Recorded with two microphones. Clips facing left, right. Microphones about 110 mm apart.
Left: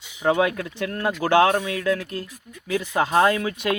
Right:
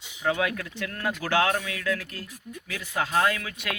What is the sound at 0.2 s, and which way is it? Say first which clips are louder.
Speech: left 6 dB; 30° left (ahead or behind).